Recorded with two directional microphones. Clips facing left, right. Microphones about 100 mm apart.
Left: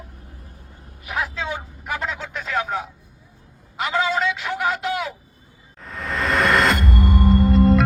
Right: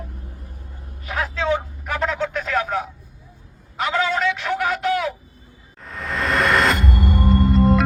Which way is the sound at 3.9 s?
15° left (ahead or behind).